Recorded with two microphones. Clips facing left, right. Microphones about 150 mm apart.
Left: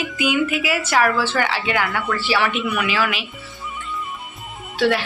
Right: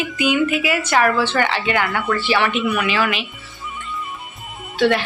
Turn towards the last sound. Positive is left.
turn(degrees=5)  # may be behind; listen again after turning